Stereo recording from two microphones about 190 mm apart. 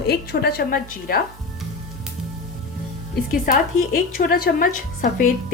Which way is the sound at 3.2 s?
50° left (ahead or behind).